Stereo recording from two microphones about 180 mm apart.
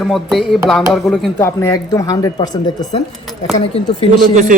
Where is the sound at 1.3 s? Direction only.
15° left (ahead or behind); by 4.1 s 35° left (ahead or behind).